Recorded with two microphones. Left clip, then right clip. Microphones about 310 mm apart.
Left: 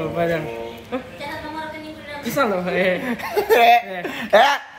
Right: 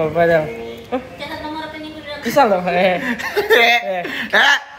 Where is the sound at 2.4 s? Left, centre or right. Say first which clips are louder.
Right 6 dB; centre.